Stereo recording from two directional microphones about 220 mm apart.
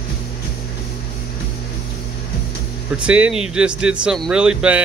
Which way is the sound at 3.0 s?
5° right (ahead or behind).